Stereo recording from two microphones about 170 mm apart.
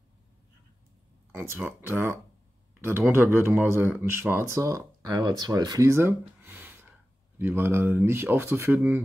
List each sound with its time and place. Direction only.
1.6 s speech: 15° right (ahead or behind)